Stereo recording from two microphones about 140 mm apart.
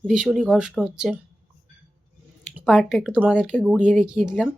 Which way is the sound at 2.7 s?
5° right (ahead or behind).